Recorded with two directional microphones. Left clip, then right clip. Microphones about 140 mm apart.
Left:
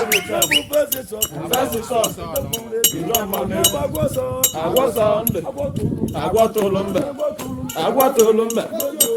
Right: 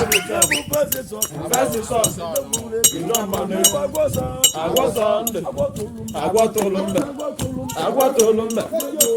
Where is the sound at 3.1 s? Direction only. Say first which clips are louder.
Even; centre (ahead or behind).